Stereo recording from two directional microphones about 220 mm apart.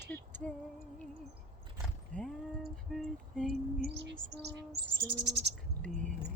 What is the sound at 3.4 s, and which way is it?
Bird, 45° right (ahead or behind).